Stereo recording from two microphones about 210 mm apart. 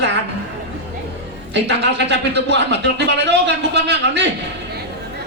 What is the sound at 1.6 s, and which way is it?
Speech, 55° right (ahead or behind).